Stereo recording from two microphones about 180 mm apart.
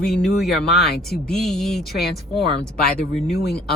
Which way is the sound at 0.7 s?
60° left (ahead or behind).